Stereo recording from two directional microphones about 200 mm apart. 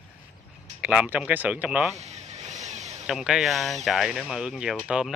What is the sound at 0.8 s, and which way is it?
Speech, 10° right (ahead or behind).